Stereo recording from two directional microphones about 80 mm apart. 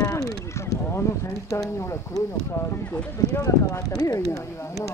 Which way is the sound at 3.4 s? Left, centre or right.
Left.